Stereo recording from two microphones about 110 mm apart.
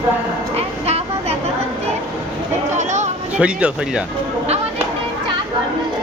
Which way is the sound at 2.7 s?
90° right.